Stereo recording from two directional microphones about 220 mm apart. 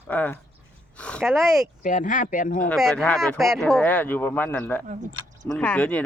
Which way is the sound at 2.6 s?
5° left (ahead or behind).